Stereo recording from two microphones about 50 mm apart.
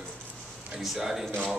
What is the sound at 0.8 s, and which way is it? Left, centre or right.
Speech, centre.